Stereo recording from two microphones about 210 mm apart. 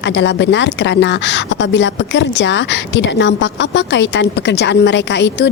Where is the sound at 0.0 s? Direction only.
55° left (ahead or behind).